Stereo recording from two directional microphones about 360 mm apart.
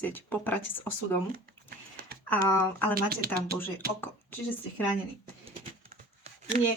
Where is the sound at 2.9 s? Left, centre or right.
Right.